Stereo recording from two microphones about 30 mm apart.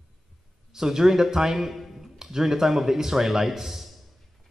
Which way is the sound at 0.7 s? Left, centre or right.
Centre.